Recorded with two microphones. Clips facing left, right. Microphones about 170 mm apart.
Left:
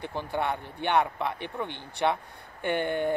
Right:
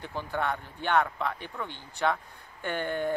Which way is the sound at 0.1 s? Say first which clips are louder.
Even; 20° left (ahead or behind).